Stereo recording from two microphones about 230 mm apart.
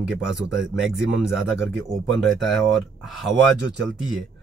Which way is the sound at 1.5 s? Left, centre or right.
Centre.